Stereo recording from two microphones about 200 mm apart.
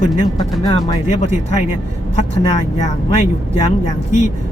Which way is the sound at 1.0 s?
35° left (ahead or behind).